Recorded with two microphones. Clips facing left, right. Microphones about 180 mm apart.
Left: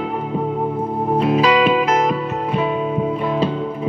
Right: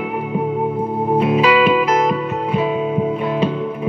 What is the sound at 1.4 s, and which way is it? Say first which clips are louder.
Music: right 1 dB; 40° left (ahead or behind).